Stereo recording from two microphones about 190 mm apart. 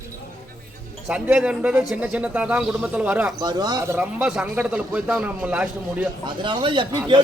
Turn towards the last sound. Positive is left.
turn(degrees=-25)  # may be behind; listen again after turning